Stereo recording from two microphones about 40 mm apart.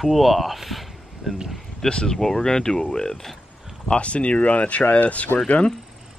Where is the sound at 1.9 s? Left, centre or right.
Left.